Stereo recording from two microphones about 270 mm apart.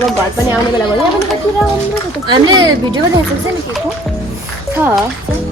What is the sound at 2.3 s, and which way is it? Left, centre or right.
Speech, centre.